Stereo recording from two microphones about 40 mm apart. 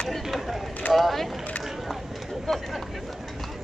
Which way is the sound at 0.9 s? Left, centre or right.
Centre.